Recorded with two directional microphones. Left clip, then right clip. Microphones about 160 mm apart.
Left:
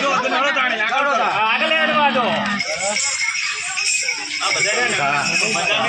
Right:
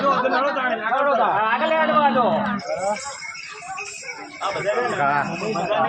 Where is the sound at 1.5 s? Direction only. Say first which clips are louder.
Left 2 dB; 30° left (ahead or behind).